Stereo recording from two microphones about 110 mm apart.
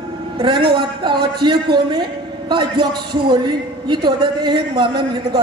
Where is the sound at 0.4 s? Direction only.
45° right (ahead or behind).